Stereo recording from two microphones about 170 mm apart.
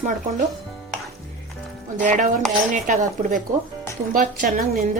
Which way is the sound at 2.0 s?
50° right (ahead or behind).